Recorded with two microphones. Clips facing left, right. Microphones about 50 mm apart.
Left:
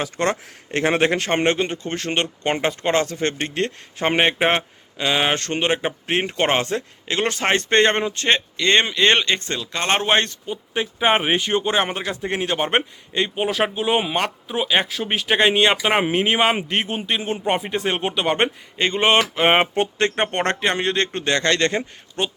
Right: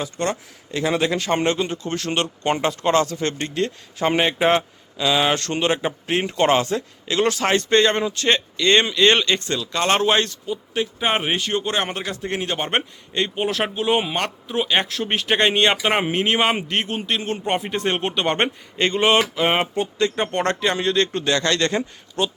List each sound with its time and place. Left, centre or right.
0.0 s speech: left; by 18.5 s centre
18.8 s a sound: centre
19.4 s speech: left
19.7 s speech: left
20.2 s speech: left